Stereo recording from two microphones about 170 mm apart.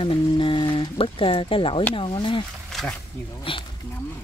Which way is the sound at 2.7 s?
Centre (ahead or behind).